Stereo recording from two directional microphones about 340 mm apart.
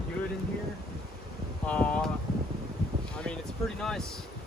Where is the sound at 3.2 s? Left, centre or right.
Centre.